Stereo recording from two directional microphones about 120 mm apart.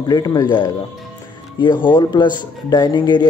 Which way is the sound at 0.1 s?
30° left (ahead or behind).